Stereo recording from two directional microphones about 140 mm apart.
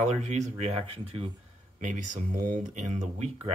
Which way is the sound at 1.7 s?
65° right (ahead or behind).